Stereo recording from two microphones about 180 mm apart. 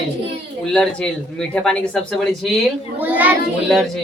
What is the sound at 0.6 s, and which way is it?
Speech, 5° left (ahead or behind).